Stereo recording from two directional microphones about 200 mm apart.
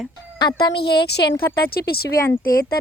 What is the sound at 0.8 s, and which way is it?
Speech, 55° left (ahead or behind).